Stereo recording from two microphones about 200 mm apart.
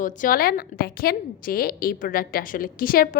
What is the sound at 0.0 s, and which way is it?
A woman's voice, 45° left (ahead or behind).